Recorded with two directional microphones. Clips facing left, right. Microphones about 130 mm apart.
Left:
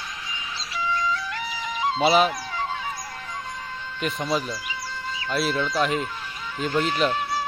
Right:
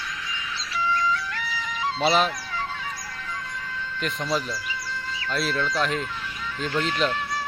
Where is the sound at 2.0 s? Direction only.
5° left (ahead or behind).